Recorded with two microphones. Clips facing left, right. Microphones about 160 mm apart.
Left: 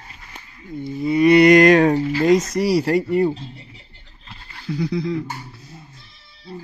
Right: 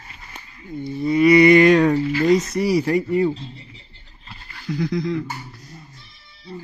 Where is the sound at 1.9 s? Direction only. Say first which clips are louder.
Even; 30° left (ahead or behind).